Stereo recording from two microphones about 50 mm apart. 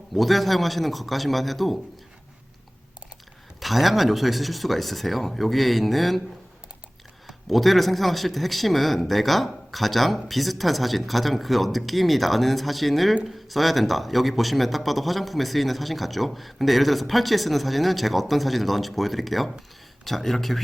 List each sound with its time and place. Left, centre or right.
0.2 s a man's voice: centre
3.6 s a man's voice: centre
7.3 s a man's voice: centre